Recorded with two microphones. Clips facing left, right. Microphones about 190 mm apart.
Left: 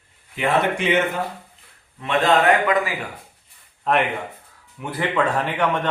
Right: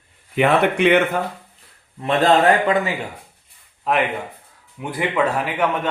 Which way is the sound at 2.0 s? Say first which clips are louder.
Right 2 dB; 30° right (ahead or behind).